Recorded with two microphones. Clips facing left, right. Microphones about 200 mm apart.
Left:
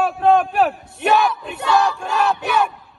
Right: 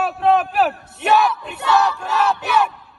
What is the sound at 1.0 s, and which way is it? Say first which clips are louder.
Battle cry: even; centre (ahead or behind).